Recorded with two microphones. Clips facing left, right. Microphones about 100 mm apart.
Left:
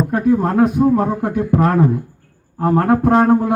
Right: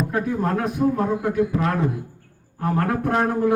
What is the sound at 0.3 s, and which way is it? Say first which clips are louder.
Speech: left 9 dB; 45° left (ahead or behind).